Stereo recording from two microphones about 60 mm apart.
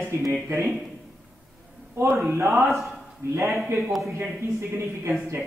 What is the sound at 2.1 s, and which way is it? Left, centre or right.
Speech, right.